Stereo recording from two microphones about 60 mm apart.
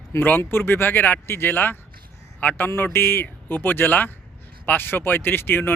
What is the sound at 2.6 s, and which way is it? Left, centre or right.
Speech, left.